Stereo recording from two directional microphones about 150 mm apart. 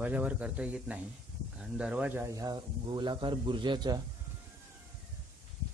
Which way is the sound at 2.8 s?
30° right (ahead or behind).